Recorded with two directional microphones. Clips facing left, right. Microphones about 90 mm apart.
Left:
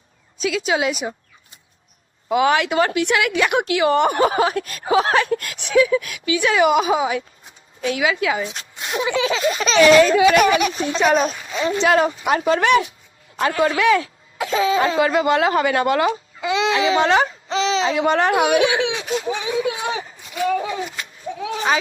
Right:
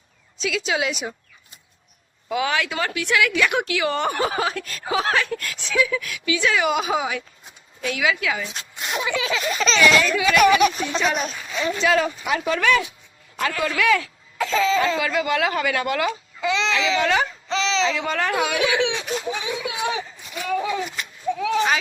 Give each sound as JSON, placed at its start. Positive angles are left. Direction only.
{"t": 0.4, "sound": "speech", "side_deg": 40}
{"t": 2.3, "sound": "a woman's voice", "side_deg": 25}
{"t": 4.1, "sound": "a woman's voice", "side_deg": 30}
{"t": 6.6, "sound": "speech", "side_deg": 40}
{"t": 6.9, "sound": "speech", "side_deg": 30}
{"t": 14.8, "sound": "speech", "side_deg": 30}
{"t": 17.9, "sound": "a woman's voice", "side_deg": 25}
{"t": 19.9, "sound": "a sound", "side_deg": 30}
{"t": 21.4, "sound": "speech", "side_deg": 35}